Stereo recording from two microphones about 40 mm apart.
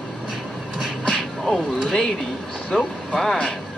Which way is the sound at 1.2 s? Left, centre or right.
Centre.